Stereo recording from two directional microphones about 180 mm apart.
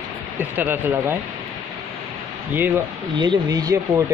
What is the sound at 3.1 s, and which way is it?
Speech, 25° right (ahead or behind).